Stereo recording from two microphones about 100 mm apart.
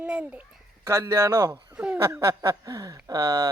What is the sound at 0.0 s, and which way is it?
Speech, 15° right (ahead or behind).